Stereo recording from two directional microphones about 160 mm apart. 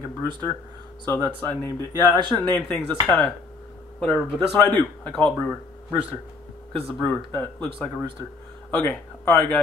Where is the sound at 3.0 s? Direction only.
Centre (ahead or behind).